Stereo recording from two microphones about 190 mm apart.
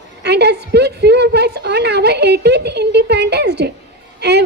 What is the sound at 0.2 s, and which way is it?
A woman's voice, 60° right (ahead or behind).